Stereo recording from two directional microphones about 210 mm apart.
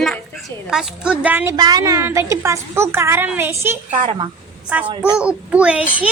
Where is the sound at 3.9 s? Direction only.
35° right (ahead or behind).